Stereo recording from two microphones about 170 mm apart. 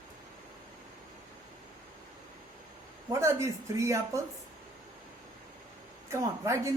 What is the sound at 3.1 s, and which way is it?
Speech, 15° right (ahead or behind).